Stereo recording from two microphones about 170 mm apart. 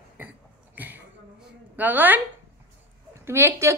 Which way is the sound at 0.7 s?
10° right (ahead or behind).